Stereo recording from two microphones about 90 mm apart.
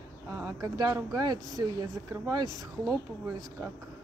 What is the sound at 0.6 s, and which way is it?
Speech, 45° right (ahead or behind).